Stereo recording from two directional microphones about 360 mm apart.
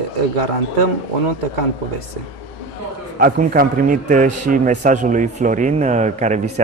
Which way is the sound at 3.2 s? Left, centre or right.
Right.